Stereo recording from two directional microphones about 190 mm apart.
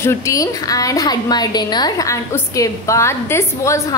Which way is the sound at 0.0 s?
15° left (ahead or behind).